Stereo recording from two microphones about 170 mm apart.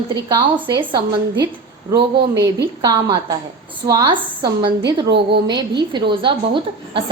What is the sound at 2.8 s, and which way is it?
A woman's voice, 25° right (ahead or behind).